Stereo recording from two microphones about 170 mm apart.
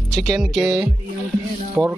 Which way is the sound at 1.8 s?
Centre (ahead or behind).